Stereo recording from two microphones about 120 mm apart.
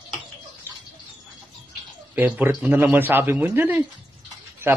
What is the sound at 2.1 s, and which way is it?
Speech, 15° right (ahead or behind).